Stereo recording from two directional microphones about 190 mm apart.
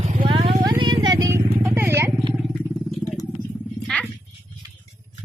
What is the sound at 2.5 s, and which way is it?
Vehicle, 5° left (ahead or behind).